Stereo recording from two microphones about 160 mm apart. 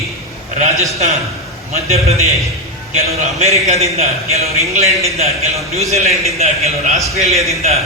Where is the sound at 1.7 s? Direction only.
40° right (ahead or behind).